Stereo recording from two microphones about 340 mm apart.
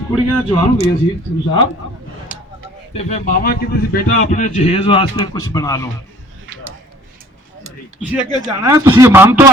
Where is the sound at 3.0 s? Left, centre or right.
Left.